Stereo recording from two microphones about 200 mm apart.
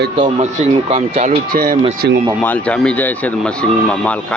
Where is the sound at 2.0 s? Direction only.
55° right (ahead or behind).